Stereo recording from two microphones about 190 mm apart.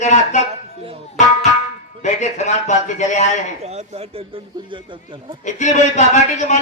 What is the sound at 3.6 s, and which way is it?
Speech, 35° right (ahead or behind).